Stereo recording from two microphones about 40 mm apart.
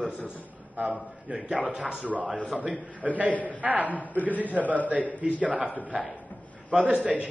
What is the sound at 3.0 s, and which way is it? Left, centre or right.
Speech, right.